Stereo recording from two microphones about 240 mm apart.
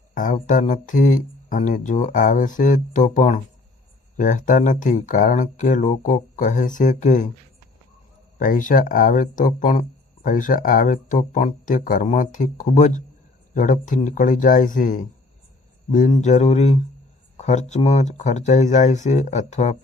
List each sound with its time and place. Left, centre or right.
0.1 s a sound: left
0.3 s speech: left
8.4 s speech: left